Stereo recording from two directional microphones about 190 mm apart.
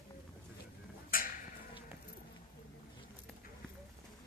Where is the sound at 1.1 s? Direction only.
50° left (ahead or behind).